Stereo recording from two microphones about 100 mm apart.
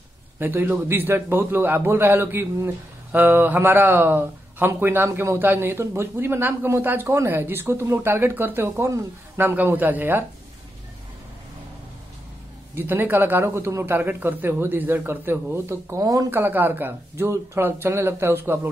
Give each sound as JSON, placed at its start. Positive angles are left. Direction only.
{"t": 0.4, "sound": "a man's voice", "side_deg": -20}
{"t": 12.7, "sound": "a man's voice", "side_deg": -20}
{"t": 16.3, "sound": "a man's voice", "side_deg": -20}